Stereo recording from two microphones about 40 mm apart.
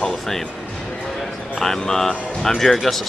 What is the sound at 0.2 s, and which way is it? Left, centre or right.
Speech, centre.